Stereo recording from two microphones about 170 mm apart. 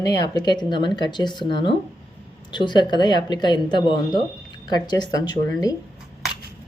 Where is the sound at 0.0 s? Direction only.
25° left (ahead or behind).